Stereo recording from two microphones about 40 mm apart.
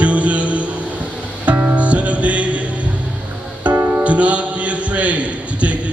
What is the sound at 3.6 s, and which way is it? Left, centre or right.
Music, right.